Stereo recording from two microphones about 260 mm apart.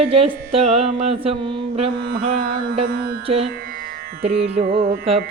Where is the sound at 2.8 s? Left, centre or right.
Right.